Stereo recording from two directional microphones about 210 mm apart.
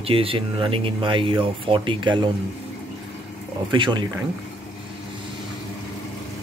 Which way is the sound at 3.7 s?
20° right (ahead or behind).